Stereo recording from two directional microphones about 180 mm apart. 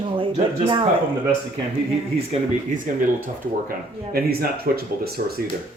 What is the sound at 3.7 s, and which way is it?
Speech, 55° right (ahead or behind).